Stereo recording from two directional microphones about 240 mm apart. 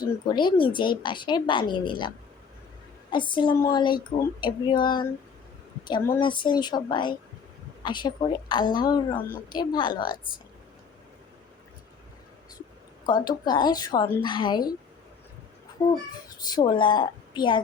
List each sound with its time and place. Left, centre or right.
0.0 s speech: centre
13.1 s speech: centre
15.8 s speech: centre